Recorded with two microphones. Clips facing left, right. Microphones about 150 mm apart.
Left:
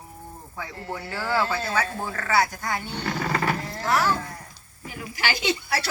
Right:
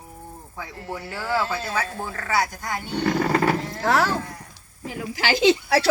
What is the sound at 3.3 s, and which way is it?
Speech, 30° right (ahead or behind).